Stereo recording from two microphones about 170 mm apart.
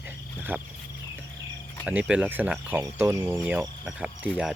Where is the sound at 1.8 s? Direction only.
5° right (ahead or behind).